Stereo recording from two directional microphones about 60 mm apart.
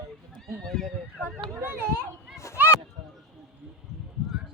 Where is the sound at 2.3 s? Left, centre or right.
Left.